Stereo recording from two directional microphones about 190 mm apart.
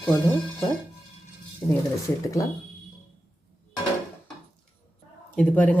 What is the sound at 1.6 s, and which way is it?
Speech, 10° left (ahead or behind).